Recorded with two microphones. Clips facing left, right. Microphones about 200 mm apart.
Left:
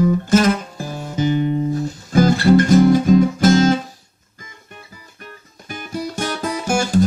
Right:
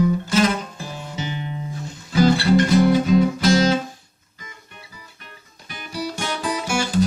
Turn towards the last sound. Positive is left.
turn(degrees=45)  # may be behind; listen again after turning